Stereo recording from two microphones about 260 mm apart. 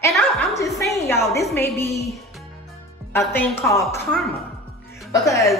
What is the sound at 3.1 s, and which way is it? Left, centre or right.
A woman's voice, centre.